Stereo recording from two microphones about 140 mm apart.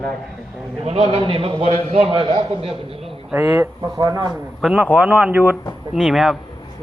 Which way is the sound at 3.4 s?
25° right (ahead or behind).